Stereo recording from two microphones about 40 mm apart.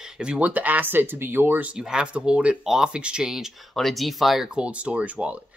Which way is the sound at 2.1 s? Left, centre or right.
Right.